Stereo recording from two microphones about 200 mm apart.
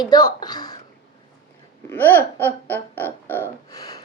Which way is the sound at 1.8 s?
10° left (ahead or behind).